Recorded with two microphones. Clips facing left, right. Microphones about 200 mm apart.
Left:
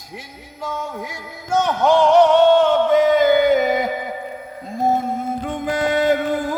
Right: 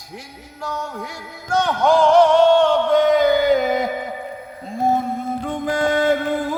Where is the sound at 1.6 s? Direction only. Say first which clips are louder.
Even; 5° left (ahead or behind).